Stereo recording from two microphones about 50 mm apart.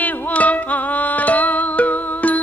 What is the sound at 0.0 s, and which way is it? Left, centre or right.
Music, left.